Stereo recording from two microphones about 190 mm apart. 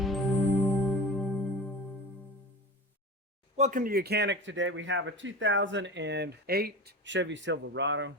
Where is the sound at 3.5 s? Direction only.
40° right (ahead or behind).